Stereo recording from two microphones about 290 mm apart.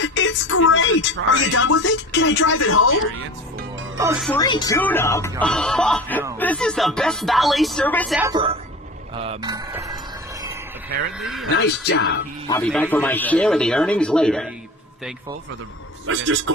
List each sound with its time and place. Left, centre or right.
0.0 s speech: left
3.9 s speech: centre
4.3 s speech: centre
8.3 s speech: centre
11.2 s speech: centre
11.9 s speech: left
12.5 s speech: centre
16.0 s a man's voice: right